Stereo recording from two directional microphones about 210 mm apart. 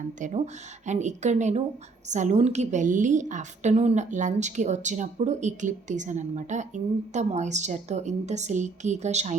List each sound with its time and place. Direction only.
0.2 s a woman's voice: 35° right (ahead or behind)